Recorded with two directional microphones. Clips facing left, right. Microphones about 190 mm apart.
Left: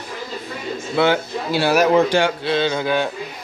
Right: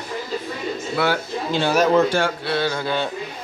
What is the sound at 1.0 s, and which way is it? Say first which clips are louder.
Speech: left 5 dB; 25° left (ahead or behind).